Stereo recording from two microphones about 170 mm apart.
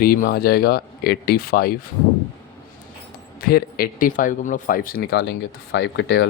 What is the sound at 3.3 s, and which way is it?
Speech, 60° left (ahead or behind).